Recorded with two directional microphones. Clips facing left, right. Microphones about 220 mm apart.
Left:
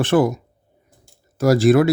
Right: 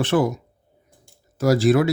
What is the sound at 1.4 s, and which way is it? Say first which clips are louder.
Speech: left 3 dB; 50° left (ahead or behind).